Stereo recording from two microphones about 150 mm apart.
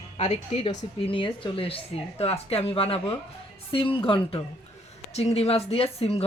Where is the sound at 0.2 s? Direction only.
50° left (ahead or behind).